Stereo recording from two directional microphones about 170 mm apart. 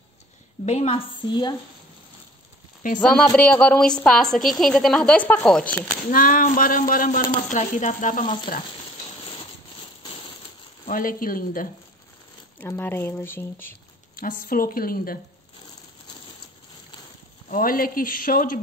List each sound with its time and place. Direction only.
0.7 s a woman's voice: 40° left (ahead or behind)
2.8 s sizzle: 50° left (ahead or behind)
3.3 s a woman's voice: 10° left (ahead or behind)
6.1 s speech: 55° left (ahead or behind)
7.4 s sizzle: 45° left (ahead or behind)
10.9 s speech: 55° left (ahead or behind)
12.5 s speech: 10° left (ahead or behind)
14.1 s speech: 55° left (ahead or behind)
17.5 s speech: 55° left (ahead or behind)